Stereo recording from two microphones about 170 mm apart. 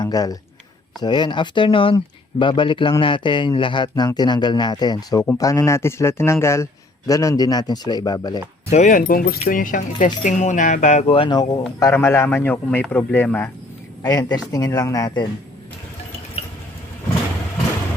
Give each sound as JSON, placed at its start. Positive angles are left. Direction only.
{"t": 0.0, "sound": "a man's voice", "side_deg": 20}
{"t": 8.7, "sound": "a man's voice", "side_deg": 50}
{"t": 14.0, "sound": "speech", "side_deg": 20}